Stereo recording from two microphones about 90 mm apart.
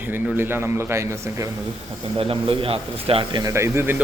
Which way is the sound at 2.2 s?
90° right.